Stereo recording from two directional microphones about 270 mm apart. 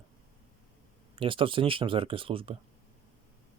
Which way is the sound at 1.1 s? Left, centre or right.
Centre.